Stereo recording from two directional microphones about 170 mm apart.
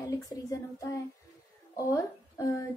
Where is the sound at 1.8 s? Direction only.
20° left (ahead or behind).